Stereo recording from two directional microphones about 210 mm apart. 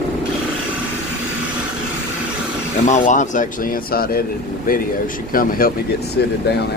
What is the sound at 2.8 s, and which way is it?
A man's voice, 35° left (ahead or behind).